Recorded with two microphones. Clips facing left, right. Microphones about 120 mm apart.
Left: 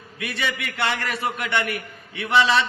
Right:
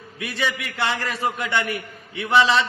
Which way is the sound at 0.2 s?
25° right (ahead or behind).